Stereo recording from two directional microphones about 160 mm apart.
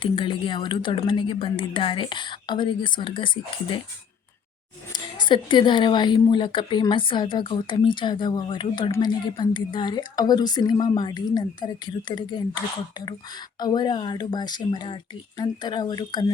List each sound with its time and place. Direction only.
0.0 s speech: 30° left (ahead or behind)
4.9 s a woman's voice: 25° left (ahead or behind)